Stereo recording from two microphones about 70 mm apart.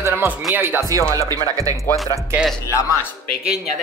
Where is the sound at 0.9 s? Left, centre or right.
Right.